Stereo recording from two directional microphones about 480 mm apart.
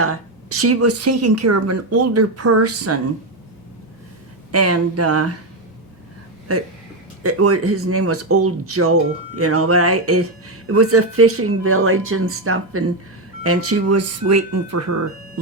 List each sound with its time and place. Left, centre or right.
0.0 s speech: right
4.5 s speech: right
7.2 s speech: right